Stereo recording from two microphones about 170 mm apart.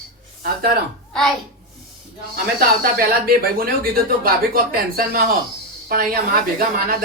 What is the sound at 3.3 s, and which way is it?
Speech, 60° right (ahead or behind).